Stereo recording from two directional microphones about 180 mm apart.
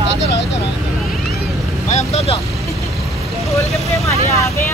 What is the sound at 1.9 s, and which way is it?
Speech, 35° left (ahead or behind).